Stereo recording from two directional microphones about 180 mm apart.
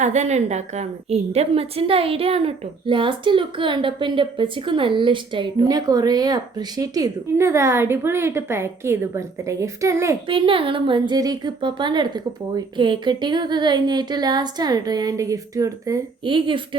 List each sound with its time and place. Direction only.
0.0 s a woman's voice: 40° right (ahead or behind); by 10.2 s 15° right (ahead or behind)
10.2 s a woman's voice: 30° right (ahead or behind)